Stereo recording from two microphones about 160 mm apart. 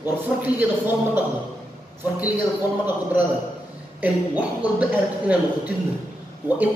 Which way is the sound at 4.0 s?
10° right (ahead or behind).